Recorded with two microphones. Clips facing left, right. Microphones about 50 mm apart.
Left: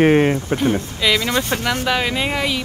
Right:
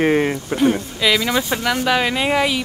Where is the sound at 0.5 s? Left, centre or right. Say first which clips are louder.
Right 2 dB; centre.